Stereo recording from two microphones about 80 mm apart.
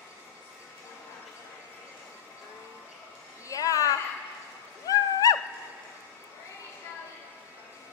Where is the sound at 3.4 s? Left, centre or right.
Left.